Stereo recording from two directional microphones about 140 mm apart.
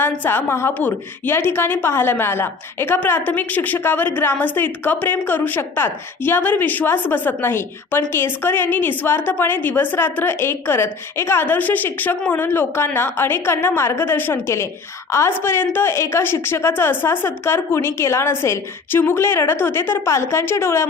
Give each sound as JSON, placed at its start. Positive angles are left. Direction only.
{"t": 0.0, "sound": "a woman's voice", "side_deg": 15}